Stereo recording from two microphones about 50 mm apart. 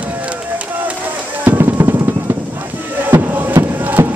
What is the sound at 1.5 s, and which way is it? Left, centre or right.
Drum, right.